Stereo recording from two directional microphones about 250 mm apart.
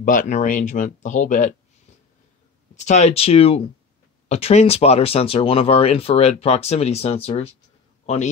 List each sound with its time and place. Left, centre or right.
0.0 s speech: left
2.7 s speech: left
8.0 s a sound: left